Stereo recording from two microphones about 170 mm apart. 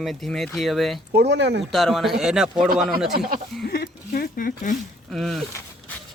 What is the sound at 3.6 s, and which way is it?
Speech, 75° left (ahead or behind).